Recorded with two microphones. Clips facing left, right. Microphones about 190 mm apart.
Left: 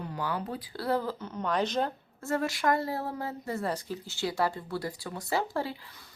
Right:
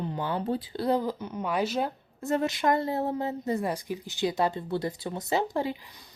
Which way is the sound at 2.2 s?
20° right (ahead or behind).